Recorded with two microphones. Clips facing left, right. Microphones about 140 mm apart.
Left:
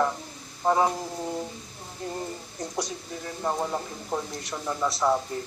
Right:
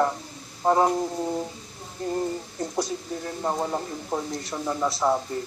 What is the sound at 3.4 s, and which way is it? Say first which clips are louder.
Speech: right 1 dB; 15° right (ahead or behind).